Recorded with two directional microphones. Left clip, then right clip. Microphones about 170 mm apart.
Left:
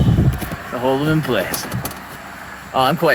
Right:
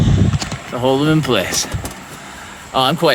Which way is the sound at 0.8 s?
35° right (ahead or behind).